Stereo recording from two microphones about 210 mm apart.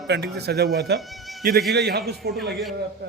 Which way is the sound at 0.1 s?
50° right (ahead or behind).